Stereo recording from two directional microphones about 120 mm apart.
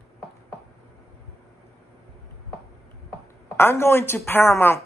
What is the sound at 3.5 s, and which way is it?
Speech, 20° left (ahead or behind).